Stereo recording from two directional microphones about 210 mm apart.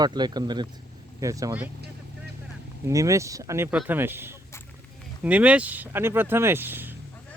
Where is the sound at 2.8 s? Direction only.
15° right (ahead or behind).